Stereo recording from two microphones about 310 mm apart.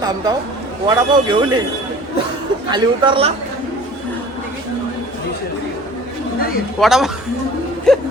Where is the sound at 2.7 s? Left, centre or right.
Centre.